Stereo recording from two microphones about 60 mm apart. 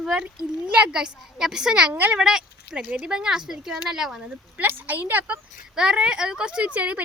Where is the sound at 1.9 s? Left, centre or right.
Right.